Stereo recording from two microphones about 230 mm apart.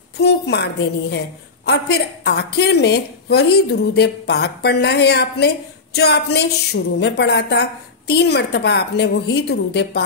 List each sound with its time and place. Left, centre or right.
0.2 s a woman's voice: left